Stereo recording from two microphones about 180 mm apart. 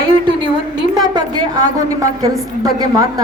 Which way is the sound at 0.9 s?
20° right (ahead or behind).